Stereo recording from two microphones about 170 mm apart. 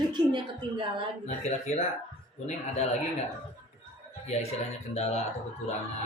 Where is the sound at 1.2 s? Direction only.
40° left (ahead or behind).